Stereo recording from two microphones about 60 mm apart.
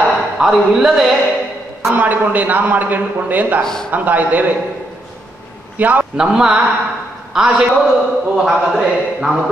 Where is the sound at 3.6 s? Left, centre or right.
Centre.